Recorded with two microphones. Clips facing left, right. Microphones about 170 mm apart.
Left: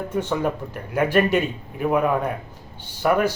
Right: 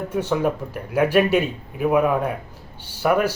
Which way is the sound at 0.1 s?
5° right (ahead or behind).